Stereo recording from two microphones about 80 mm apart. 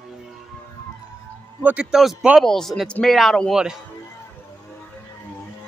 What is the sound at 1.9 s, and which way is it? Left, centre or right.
A man's voice, centre.